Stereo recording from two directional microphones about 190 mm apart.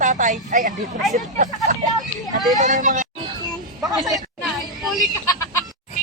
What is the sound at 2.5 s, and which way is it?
Speech, 40° right (ahead or behind).